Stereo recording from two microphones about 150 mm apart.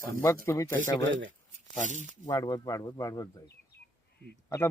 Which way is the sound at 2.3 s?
25° left (ahead or behind).